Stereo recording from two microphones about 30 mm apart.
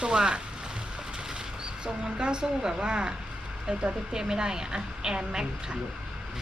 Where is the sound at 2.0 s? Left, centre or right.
Right.